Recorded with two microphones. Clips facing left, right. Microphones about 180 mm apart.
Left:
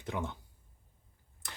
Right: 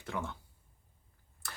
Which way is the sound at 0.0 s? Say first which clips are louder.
Left 2 dB; 20° left (ahead or behind).